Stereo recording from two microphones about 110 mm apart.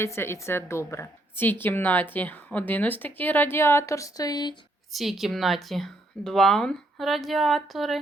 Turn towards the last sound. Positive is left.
turn(degrees=0)  # may be behind; listen again after turning